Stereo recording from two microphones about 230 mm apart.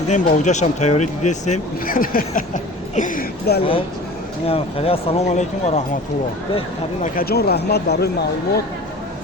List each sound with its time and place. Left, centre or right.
0.1 s speech: left
4.4 s speech: left
7.0 s speech: left